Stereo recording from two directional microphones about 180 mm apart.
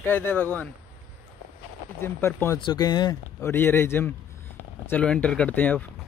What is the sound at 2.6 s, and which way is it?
Speech, 25° left (ahead or behind).